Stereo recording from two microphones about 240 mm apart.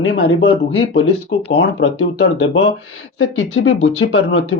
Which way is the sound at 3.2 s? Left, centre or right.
Left.